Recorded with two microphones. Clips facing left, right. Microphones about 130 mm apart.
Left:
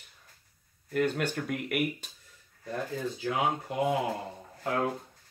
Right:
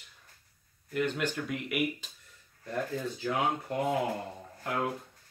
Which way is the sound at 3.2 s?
15° left (ahead or behind).